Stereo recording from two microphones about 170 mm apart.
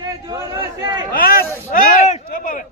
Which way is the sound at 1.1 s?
60° left (ahead or behind).